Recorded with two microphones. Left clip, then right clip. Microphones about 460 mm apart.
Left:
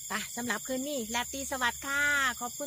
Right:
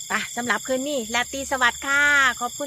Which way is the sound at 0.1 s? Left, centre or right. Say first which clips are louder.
Right 10 dB; right.